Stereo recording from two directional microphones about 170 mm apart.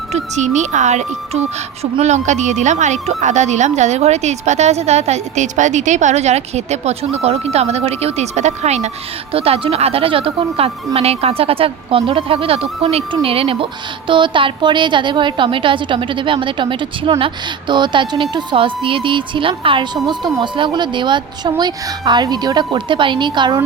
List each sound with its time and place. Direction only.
0.1 s a woman's voice: 45° right (ahead or behind); by 23.6 s 25° right (ahead or behind)